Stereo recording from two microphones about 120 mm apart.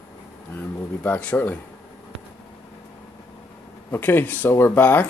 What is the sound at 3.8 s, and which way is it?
Speech, 20° left (ahead or behind).